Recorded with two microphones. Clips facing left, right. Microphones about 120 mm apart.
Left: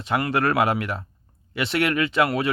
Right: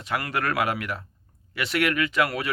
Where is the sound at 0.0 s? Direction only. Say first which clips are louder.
Left 5 dB; 25° left (ahead or behind).